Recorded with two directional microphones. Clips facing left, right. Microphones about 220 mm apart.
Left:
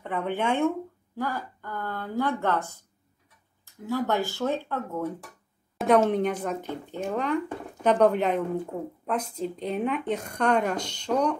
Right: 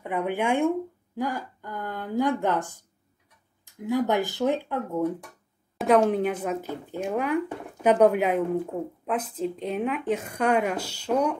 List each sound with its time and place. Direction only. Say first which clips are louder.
0.0 s speech: right 2 dB; 10° right (ahead or behind)
5.8 s speech: right 1 dB; centre (ahead or behind)